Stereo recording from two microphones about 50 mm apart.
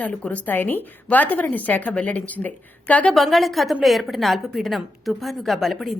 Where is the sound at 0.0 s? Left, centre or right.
Left.